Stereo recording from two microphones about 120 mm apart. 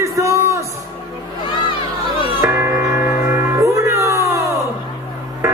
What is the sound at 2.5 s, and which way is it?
Music, 20° right (ahead or behind).